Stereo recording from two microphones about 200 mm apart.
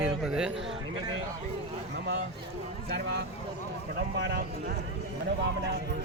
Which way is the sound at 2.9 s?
55° right (ahead or behind).